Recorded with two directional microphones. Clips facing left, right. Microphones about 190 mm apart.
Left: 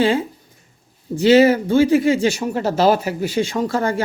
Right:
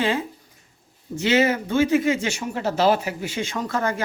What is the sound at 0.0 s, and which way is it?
Speech, 30° left (ahead or behind).